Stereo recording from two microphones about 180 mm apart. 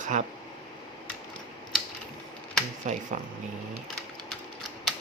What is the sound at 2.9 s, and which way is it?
Speech, 40° right (ahead or behind).